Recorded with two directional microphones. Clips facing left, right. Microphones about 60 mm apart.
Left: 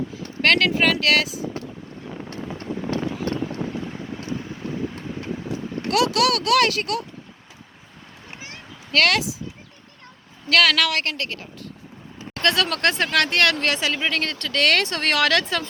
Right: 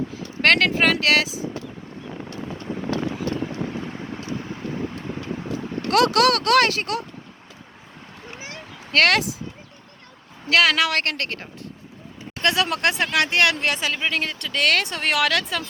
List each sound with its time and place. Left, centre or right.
0.4 s speech: right
5.9 s speech: right
8.9 s speech: right
10.5 s a woman's voice: right
10.9 s speech: right
12.3 s speech: centre